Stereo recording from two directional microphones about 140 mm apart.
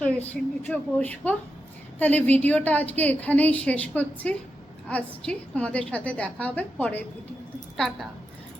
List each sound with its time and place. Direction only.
0.0 s a woman's voice: 10° left (ahead or behind)